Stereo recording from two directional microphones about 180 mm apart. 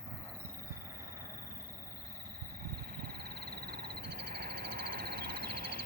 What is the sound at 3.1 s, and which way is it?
Frog, 60° right (ahead or behind).